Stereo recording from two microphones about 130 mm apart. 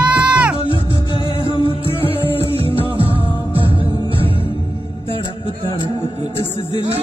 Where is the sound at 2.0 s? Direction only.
45° right (ahead or behind).